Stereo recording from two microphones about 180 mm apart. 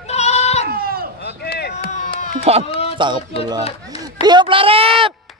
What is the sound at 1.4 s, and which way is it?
Chop, 65° left (ahead or behind).